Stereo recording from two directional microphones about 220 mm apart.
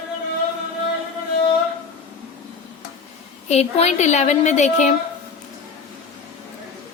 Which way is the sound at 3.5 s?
30° left (ahead or behind).